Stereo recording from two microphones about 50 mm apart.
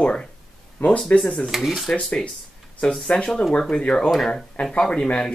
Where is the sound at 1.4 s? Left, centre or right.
Centre.